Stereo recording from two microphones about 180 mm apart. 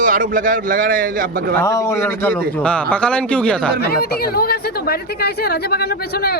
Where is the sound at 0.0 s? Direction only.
50° right (ahead or behind).